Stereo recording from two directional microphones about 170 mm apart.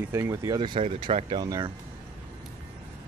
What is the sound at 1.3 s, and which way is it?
Speech, 25° right (ahead or behind).